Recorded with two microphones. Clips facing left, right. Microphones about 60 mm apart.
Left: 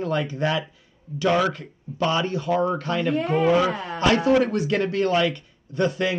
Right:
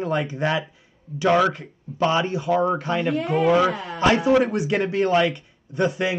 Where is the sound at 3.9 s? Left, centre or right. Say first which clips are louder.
Right 1 dB; centre.